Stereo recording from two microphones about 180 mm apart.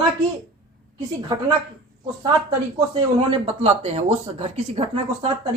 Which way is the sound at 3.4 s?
35° right (ahead or behind).